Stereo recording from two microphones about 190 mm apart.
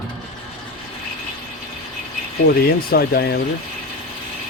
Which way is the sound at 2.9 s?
55° left (ahead or behind).